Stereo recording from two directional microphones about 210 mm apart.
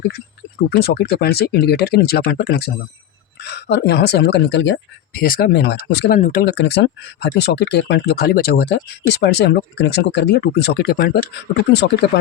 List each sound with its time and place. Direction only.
0.8 s speech: 50° left (ahead or behind)
5.1 s speech: 45° left (ahead or behind)
6.1 s speech: 35° left (ahead or behind)
6.4 s speech: 55° left (ahead or behind)